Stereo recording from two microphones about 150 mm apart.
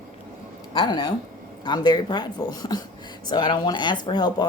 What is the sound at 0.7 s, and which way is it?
Speech, 30° left (ahead or behind).